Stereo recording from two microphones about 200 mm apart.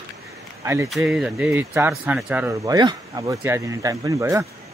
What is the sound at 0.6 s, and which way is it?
Speech, 15° right (ahead or behind).